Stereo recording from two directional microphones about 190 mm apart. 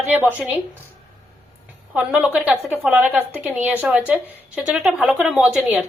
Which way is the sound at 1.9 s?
5° right (ahead or behind).